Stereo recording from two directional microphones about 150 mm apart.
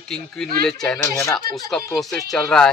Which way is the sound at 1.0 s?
20° left (ahead or behind).